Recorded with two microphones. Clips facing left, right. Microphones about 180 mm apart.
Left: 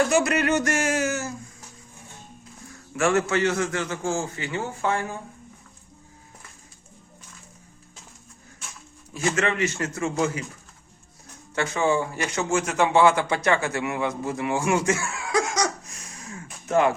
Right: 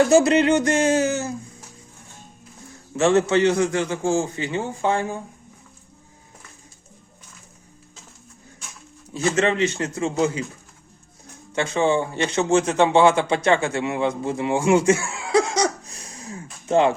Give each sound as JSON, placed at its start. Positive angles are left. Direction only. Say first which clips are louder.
{"t": 0.1, "sound": "a man's voice", "louder": "right 6 dB", "side_deg": -25}
{"t": 0.8, "sound": "a sound", "louder": "right 6 dB", "side_deg": -30}
{"t": 2.9, "sound": "a man's voice", "louder": "right 5 dB", "side_deg": -20}
{"t": 9.1, "sound": "a man's voice", "louder": "right 4 dB", "side_deg": -25}
{"t": 11.5, "sound": "a man's voice", "louder": "right 3 dB", "side_deg": -25}